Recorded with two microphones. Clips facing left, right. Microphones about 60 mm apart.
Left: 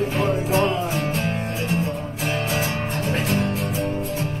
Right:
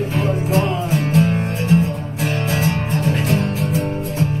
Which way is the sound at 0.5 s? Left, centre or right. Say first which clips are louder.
Right 1 dB; left.